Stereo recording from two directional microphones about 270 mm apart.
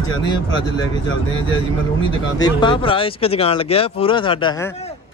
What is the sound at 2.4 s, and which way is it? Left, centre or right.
Speech, centre.